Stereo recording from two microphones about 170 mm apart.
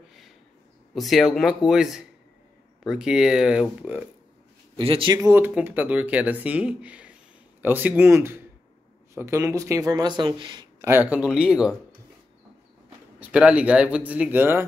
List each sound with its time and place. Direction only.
0.9 s speech: centre (ahead or behind)
4.7 s speech: 30° right (ahead or behind)
5.3 s speech: 10° right (ahead or behind)
10.9 s speech: 10° right (ahead or behind)
13.2 s speech: 5° right (ahead or behind)